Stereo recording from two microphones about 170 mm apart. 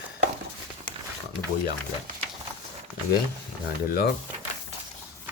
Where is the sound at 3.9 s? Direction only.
75° left (ahead or behind).